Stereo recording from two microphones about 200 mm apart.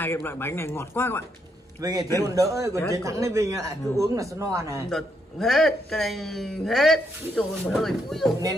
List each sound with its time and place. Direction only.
0.0 s speech: 10° left (ahead or behind)
1.8 s a man's voice: 20° right (ahead or behind)
4.8 s a man's voice: centre (ahead or behind)